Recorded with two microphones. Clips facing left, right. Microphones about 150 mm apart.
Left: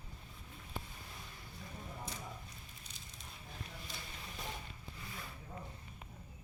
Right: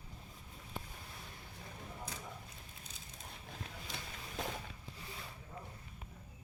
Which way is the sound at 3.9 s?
85° right.